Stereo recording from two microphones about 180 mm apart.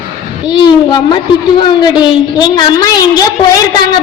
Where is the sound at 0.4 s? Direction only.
25° left (ahead or behind).